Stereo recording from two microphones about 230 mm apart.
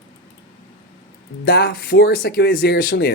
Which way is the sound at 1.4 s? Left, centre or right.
Left.